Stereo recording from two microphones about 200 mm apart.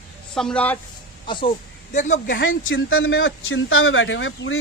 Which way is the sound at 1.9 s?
40° left (ahead or behind).